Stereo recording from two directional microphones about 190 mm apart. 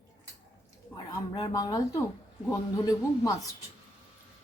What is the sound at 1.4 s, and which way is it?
Speech, 20° left (ahead or behind).